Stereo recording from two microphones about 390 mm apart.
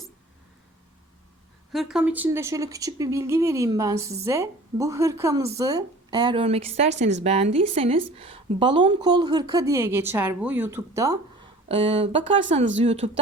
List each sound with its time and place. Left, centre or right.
1.7 s a woman's voice: centre